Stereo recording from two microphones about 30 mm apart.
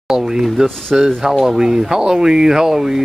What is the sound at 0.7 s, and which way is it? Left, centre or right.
Speech, centre.